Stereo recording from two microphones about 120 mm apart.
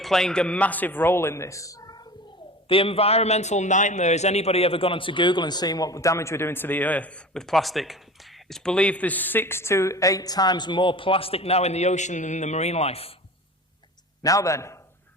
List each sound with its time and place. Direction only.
0.0 s speech: 5° left (ahead or behind); by 2.0 s 30° left (ahead or behind)
2.6 s a man's voice: 50° left (ahead or behind)
14.2 s a man's voice: 30° left (ahead or behind)